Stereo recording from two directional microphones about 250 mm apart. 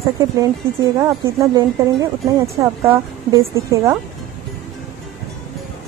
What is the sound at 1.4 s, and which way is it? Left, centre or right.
Speech, centre.